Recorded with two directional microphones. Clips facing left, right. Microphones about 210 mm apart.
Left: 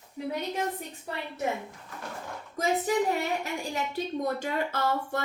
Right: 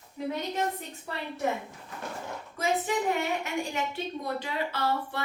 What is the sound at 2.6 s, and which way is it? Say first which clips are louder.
Speech: left 1 dB; 40° left (ahead or behind).